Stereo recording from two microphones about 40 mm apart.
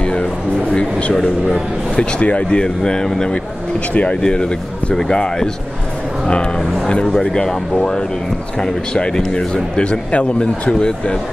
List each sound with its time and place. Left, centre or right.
0.0 s a sound: left
0.7 s speech: left
2.6 s speech: centre
3.9 s speech: left
4.2 s speech: left